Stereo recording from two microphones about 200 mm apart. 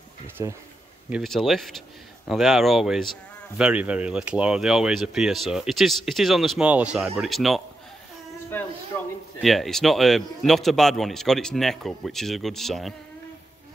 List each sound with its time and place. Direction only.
0.4 s speech: 15° right (ahead or behind)
1.1 s speech: centre (ahead or behind)
8.5 s a sound: 10° left (ahead or behind)
9.4 s speech: centre (ahead or behind)